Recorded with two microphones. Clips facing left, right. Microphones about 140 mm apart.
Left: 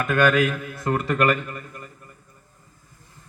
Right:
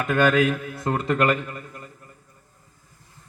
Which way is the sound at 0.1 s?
25° right (ahead or behind).